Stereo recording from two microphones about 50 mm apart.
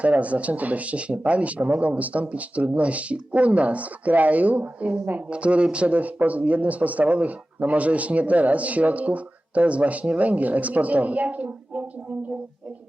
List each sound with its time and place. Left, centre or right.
0.0 s a man's voice: right